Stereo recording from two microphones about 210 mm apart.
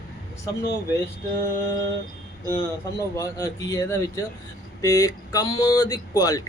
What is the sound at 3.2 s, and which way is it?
Speech, 15° left (ahead or behind).